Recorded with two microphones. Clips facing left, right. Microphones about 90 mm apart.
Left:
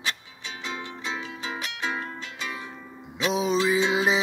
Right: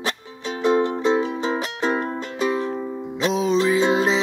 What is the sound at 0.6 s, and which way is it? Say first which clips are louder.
Music: right 17 dB; 40° right (ahead or behind).